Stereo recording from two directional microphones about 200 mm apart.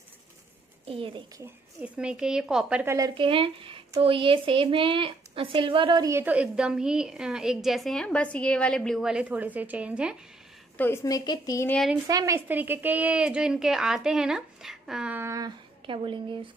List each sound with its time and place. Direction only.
0.8 s speech: 25° right (ahead or behind)
1.4 s a woman's voice: 5° right (ahead or behind)
3.2 s a woman's voice: 25° right (ahead or behind); by 10.1 s 5° right (ahead or behind)
10.8 s a woman's voice: 15° left (ahead or behind)
11.7 s a woman's voice: centre (ahead or behind)
12.1 s a woman's voice: 15° right (ahead or behind)